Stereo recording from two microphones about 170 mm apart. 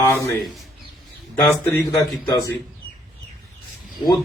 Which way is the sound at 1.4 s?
15° left (ahead or behind).